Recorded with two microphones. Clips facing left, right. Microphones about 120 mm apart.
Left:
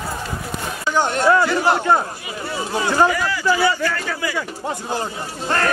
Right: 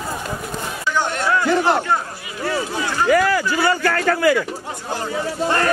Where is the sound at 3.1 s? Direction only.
50° right (ahead or behind).